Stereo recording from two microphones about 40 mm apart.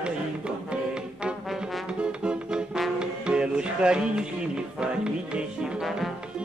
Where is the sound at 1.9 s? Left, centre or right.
Right.